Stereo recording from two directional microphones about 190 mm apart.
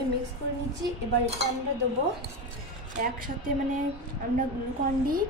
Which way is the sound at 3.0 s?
45° right (ahead or behind).